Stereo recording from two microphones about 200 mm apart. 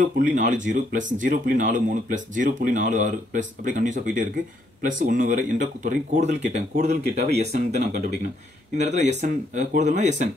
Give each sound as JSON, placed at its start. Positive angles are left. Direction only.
{"t": 0.3, "sound": "speech", "side_deg": -40}